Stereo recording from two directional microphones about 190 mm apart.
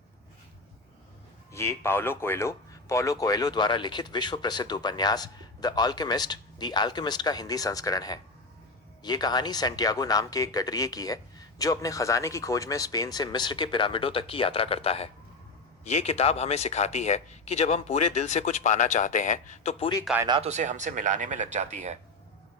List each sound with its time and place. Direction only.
1.5 s speech: 15° left (ahead or behind); by 19.9 s 40° left (ahead or behind)
20.2 s speech: 25° right (ahead or behind)
20.5 s speech: 40° right (ahead or behind)